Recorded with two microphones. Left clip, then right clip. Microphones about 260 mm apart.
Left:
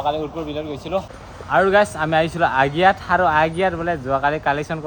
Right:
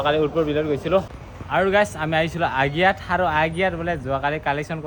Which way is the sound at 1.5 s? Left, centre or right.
Left.